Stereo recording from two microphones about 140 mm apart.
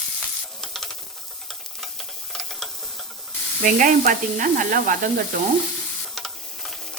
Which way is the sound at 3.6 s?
70° right (ahead or behind).